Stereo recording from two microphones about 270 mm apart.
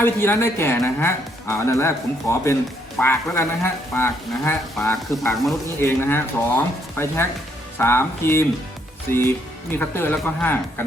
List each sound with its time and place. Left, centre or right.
0.0 s speech: centre